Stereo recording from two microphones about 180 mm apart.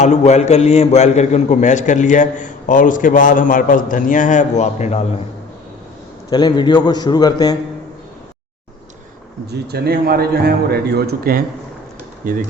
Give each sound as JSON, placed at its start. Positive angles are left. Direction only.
{"t": 0.0, "sound": "a man's voice", "side_deg": 40}
{"t": 6.3, "sound": "a man's voice", "side_deg": 25}
{"t": 9.5, "sound": "a man's voice", "side_deg": -65}